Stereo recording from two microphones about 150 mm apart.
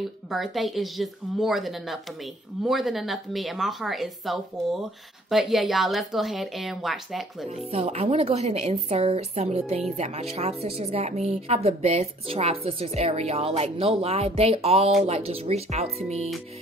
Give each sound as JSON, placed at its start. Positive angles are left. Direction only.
{"t": 0.3, "sound": "speech", "side_deg": 0}
{"t": 7.4, "sound": "a woman's voice", "side_deg": -50}